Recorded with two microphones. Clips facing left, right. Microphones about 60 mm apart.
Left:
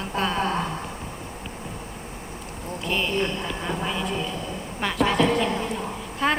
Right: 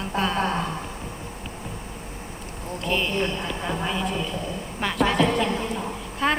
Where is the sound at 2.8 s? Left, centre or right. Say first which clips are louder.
Even; centre.